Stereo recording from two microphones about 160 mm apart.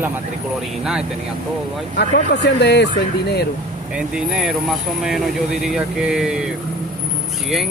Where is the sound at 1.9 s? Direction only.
90° left.